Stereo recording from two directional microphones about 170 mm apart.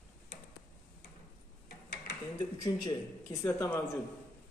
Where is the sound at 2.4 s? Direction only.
25° left (ahead or behind).